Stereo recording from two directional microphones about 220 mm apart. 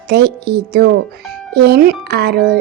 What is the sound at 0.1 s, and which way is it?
Speech, 45° right (ahead or behind).